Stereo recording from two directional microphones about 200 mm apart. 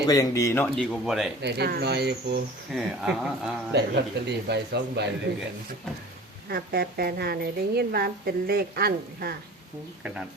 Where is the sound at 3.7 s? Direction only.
55° right (ahead or behind).